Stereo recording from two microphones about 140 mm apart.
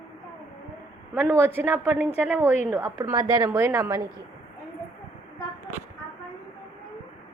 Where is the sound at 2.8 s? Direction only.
25° right (ahead or behind).